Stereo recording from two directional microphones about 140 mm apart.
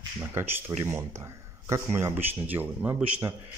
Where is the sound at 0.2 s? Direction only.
15° right (ahead or behind).